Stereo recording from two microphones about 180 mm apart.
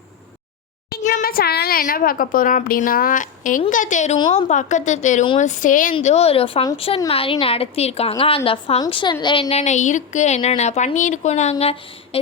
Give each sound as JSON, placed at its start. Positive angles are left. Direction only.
{"t": 1.0, "sound": "a woman's voice", "side_deg": 55}